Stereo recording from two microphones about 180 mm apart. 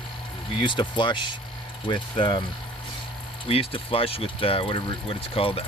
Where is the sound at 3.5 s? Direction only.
30° left (ahead or behind).